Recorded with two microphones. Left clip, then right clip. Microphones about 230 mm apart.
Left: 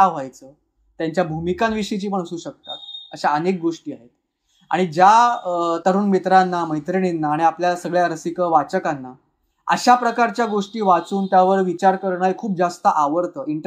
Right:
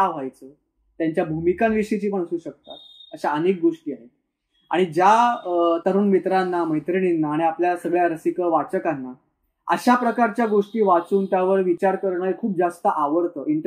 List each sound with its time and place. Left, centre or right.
0.0 s speech: centre